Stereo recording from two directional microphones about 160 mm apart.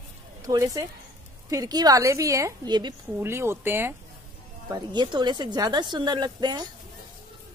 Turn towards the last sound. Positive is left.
turn(degrees=-25)  # may be behind; listen again after turning